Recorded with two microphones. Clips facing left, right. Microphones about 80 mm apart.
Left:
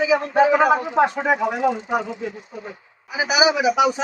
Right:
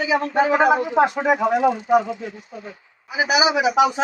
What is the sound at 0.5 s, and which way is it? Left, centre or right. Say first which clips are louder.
Speech: even; centre.